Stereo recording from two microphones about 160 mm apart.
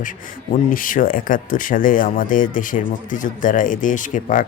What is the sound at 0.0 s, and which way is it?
Speech, 55° left (ahead or behind).